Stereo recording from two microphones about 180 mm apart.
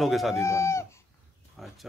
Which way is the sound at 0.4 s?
15° left (ahead or behind).